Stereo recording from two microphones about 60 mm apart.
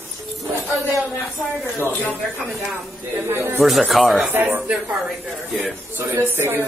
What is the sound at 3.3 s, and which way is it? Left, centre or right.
Speech, right.